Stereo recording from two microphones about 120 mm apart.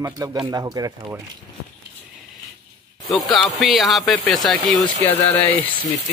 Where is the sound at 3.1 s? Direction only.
Centre (ahead or behind).